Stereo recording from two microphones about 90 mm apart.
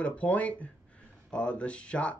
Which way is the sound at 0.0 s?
15° left (ahead or behind).